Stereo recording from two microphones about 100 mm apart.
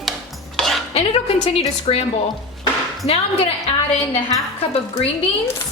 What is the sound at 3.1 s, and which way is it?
A woman's voice, 90° left.